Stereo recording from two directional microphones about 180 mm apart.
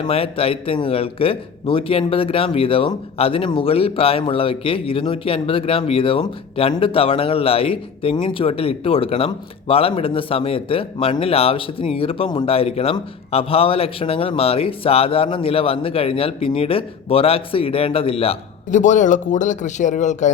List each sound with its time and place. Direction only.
0.0 s speech: 30° left (ahead or behind)